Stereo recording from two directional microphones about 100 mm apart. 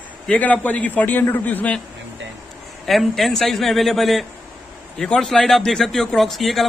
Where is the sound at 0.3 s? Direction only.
15° left (ahead or behind).